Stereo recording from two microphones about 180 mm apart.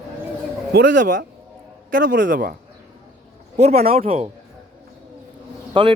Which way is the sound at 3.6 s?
35° right (ahead or behind).